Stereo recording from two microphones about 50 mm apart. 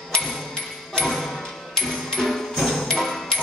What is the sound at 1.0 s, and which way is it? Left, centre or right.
Music, centre.